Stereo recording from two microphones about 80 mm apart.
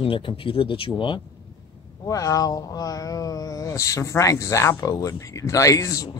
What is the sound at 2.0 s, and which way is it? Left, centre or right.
Speech, left.